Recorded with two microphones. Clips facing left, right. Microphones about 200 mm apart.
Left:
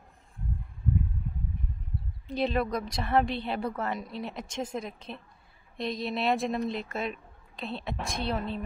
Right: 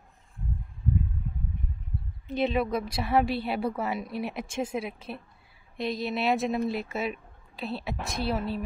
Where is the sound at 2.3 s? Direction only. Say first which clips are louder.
Right 2 dB; centre (ahead or behind).